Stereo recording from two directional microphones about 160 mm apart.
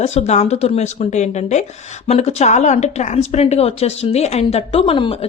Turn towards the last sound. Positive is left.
turn(degrees=35)  # may be behind; listen again after turning